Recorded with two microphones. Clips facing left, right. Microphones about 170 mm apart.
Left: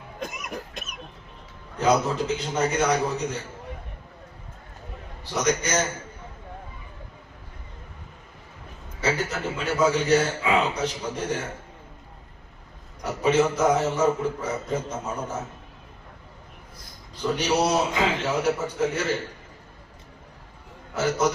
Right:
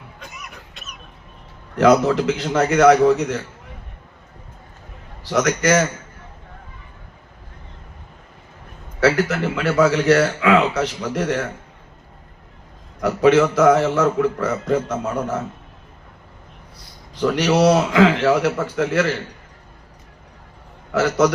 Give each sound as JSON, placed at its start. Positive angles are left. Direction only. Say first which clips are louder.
{"t": 0.2, "sound": "cough", "louder": "left 8 dB", "side_deg": 45}
{"t": 1.7, "sound": "a man's voice", "louder": "right 8 dB", "side_deg": -90}
{"t": 5.2, "sound": "a man's voice", "louder": "right 6 dB", "side_deg": -90}
{"t": 9.0, "sound": "a man's voice", "louder": "right 9 dB", "side_deg": -90}
{"t": 13.0, "sound": "a man's voice", "louder": "right 7 dB", "side_deg": -90}
{"t": 17.2, "sound": "a man's voice", "louder": "right 7 dB", "side_deg": -90}
{"t": 20.9, "sound": "a man's voice", "louder": "right 6 dB", "side_deg": -90}